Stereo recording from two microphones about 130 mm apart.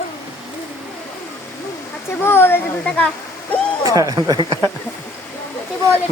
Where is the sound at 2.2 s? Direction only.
20° left (ahead or behind).